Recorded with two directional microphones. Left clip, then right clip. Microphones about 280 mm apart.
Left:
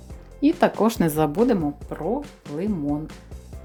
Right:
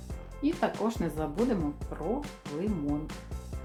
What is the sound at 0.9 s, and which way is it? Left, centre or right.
Speech, left.